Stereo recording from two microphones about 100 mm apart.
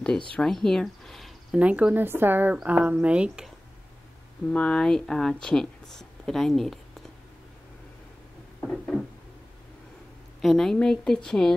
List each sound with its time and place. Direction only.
0.4 s speech: 5° left (ahead or behind)
1.5 s speech: 15° right (ahead or behind)
4.5 s speech: 10° left (ahead or behind)
8.6 s a sound: 5° left (ahead or behind)
10.4 s speech: 5° left (ahead or behind)